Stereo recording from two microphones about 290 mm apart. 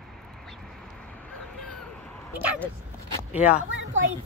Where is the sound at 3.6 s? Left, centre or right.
Right.